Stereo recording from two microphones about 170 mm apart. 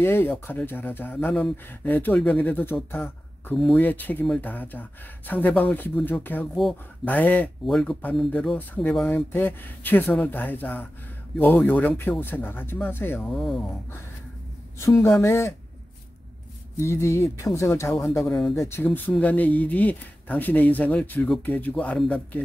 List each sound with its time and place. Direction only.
0.0 s speech: 15° left (ahead or behind)
13.3 s speech: centre (ahead or behind)
14.8 s speech: 15° left (ahead or behind)
16.7 s speech: 15° left (ahead or behind)
18.2 s speech: centre (ahead or behind)
18.7 s speech: 10° left (ahead or behind)